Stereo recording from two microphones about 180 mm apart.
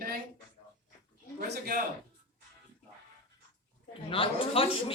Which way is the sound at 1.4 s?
50° right (ahead or behind).